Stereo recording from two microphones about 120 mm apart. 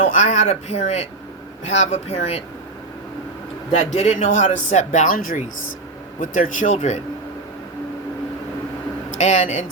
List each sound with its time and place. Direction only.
0.0 s speech: 90° left; by 2.4 s 60° left (ahead or behind)
3.7 s speech: 65° left (ahead or behind); by 7.0 s 80° left
9.0 s speech: 75° left (ahead or behind)